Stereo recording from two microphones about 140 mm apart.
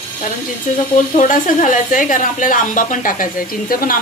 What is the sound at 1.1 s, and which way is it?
A woman's voice, 65° left (ahead or behind).